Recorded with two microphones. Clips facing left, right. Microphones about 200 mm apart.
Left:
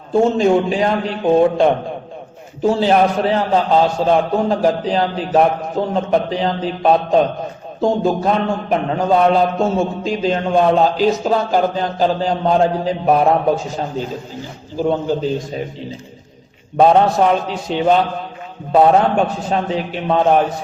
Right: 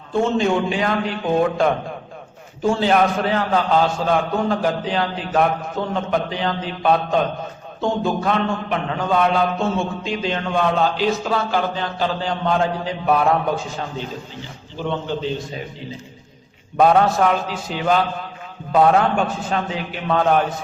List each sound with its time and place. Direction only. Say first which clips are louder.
0.1 s a man's voice: left 5 dB; 35° left (ahead or behind)
14.8 s a man's voice: left 7 dB; 40° left (ahead or behind)
16.7 s a man's voice: left 3 dB; 25° left (ahead or behind)